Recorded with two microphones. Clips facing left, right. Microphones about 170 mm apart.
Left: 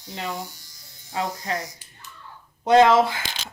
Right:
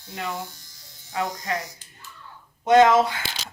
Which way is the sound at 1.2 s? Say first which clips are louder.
Even; 30° left (ahead or behind).